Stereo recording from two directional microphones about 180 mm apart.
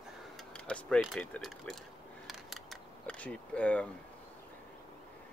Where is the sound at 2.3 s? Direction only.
Centre (ahead or behind).